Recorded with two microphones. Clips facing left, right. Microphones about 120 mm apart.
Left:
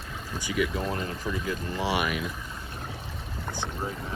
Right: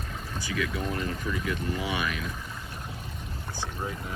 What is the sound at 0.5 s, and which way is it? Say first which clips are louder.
Speech: left 3 dB; 20° left (ahead or behind).